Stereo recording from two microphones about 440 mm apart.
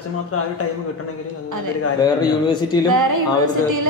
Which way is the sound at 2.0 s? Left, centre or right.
Centre.